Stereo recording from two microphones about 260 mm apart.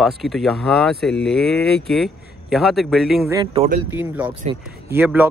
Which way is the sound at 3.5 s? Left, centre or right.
Right.